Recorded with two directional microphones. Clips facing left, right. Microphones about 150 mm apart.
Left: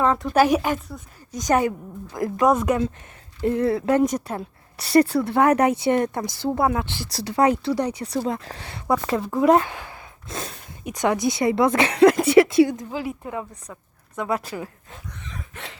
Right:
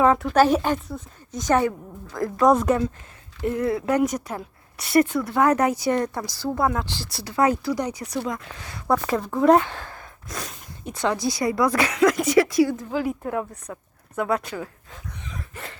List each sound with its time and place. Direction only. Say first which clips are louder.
0.0 s a sound: right 3 dB; 5° right (ahead or behind)
0.3 s speech: even; 10° left (ahead or behind)
3.4 s a woman's voice: left 3 dB; 30° left (ahead or behind)
7.1 s a woman's voice: left 2 dB; 30° left (ahead or behind)
9.1 s speech: even; 5° left (ahead or behind)
10.2 s a woman's voice: left 2 dB; 25° left (ahead or behind)
13.1 s speech: right 4 dB; centre (ahead or behind)
14.5 s speech: even; 20° left (ahead or behind)
15.1 s a sound: right 2 dB; 5° right (ahead or behind)